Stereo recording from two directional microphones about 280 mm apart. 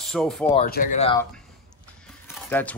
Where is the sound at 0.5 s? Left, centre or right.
Left.